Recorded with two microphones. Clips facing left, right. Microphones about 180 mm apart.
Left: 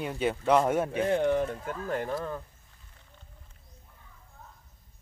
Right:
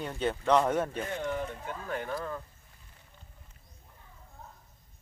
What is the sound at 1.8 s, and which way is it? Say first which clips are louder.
Speech: left 4 dB; 35° left (ahead or behind).